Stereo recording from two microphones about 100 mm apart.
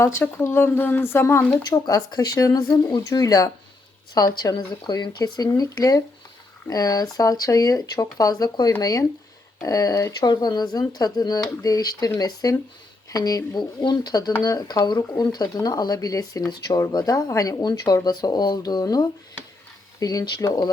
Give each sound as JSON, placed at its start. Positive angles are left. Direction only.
{"t": 0.0, "sound": "speech", "side_deg": 25}
{"t": 1.6, "sound": "speech", "side_deg": 40}